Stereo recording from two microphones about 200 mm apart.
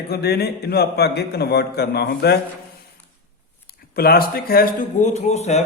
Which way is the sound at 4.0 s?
50° left (ahead or behind).